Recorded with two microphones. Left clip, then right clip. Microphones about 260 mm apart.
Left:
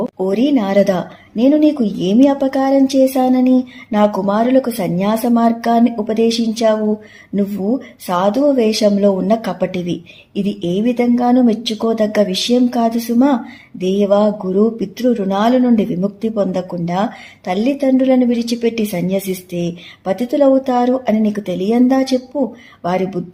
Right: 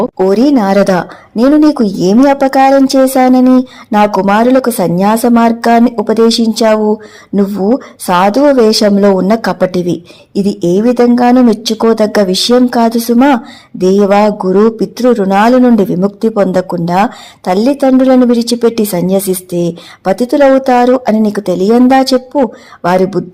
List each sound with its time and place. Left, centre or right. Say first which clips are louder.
0.2 s speech: right 7 dB; right
22.8 s speech: right 8 dB; right